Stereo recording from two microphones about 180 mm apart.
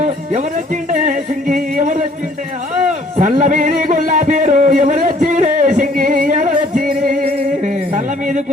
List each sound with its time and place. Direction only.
0.0 s music: 40° right (ahead or behind)
2.8 s a sound: 45° right (ahead or behind)
7.3 s music: 40° right (ahead or behind)